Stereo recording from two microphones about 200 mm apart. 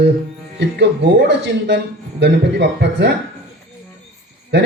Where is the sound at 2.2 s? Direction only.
60° right (ahead or behind).